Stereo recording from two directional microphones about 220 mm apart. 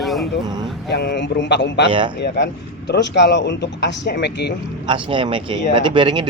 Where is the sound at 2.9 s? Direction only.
50° left (ahead or behind).